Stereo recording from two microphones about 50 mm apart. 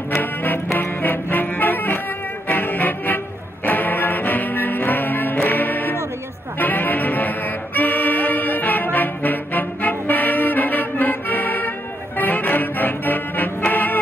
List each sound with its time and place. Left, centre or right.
0.2 s music: left
0.7 s brass instrument: left
2.4 s music: left